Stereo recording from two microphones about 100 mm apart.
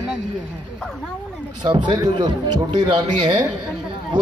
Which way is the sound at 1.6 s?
50° right (ahead or behind).